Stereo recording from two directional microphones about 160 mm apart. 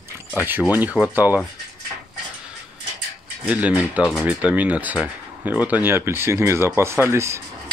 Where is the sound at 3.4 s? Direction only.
10° right (ahead or behind).